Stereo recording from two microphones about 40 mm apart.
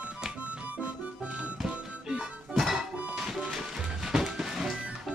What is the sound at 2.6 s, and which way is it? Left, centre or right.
Music, centre.